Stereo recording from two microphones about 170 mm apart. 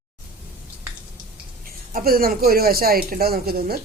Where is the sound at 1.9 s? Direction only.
60° right (ahead or behind).